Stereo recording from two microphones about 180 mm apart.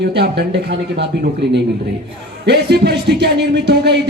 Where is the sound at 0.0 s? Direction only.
70° right (ahead or behind).